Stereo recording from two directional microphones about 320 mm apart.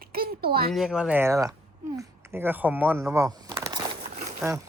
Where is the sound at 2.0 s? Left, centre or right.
Centre.